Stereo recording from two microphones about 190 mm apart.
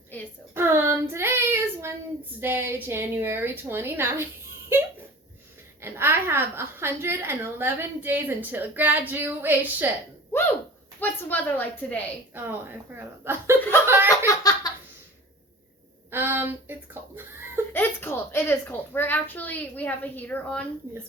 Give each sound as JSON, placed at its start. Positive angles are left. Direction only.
{"t": 0.5, "sound": "child singing", "side_deg": -10}
{"t": 2.4, "sound": "a woman's voice", "side_deg": -10}
{"t": 4.7, "sound": "a sound", "side_deg": -10}
{"t": 5.8, "sound": "a woman's voice", "side_deg": -10}
{"t": 11.0, "sound": "a child's voice", "side_deg": 10}
{"t": 12.3, "sound": "a woman's voice", "side_deg": -10}
{"t": 13.8, "sound": "chuckle", "side_deg": -10}
{"t": 14.3, "sound": "laughter", "side_deg": 20}
{"t": 16.1, "sound": "speech", "side_deg": -10}
{"t": 17.7, "sound": "a child's voice", "side_deg": 10}